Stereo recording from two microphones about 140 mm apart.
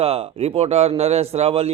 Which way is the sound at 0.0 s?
45° right (ahead or behind).